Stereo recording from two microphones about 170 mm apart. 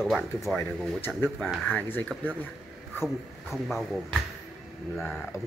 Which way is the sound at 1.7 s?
10° left (ahead or behind).